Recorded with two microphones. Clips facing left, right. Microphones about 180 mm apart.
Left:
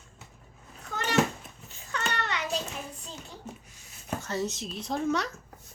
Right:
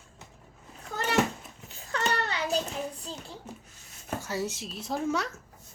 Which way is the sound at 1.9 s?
35° right (ahead or behind).